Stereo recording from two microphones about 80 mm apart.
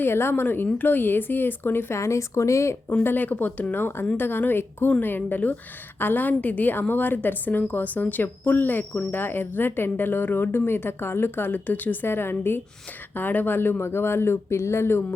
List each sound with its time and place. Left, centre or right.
0.0 s speech: left
3.0 s speech: left